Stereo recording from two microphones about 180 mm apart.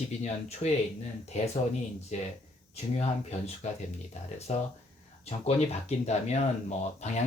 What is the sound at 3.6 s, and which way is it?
Speech, 35° left (ahead or behind).